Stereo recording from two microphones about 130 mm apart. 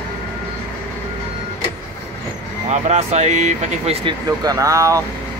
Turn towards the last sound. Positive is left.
turn(degrees=-25)  # may be behind; listen again after turning